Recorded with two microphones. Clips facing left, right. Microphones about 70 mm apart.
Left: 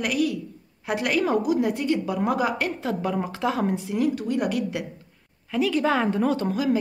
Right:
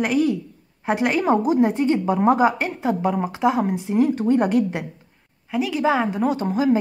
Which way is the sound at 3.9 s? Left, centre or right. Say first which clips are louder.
Right 6 dB; right.